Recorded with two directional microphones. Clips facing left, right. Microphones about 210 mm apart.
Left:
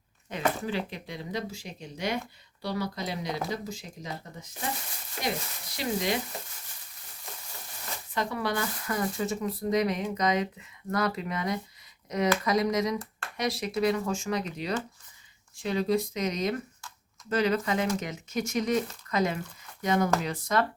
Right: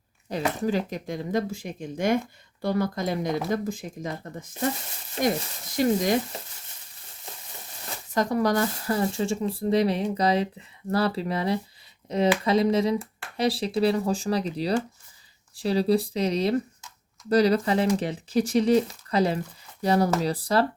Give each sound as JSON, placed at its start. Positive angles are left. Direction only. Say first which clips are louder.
{"t": 0.6, "sound": "speech", "louder": "right 6 dB", "side_deg": -40}
{"t": 5.7, "sound": "speech", "louder": "right 7 dB", "side_deg": -45}
{"t": 8.1, "sound": "speech", "louder": "right 7 dB", "side_deg": -40}